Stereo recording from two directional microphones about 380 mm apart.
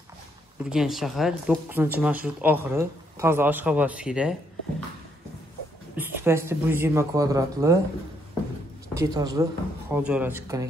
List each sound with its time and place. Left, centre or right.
0.7 s speech: centre
5.9 s speech: centre
8.9 s speech: centre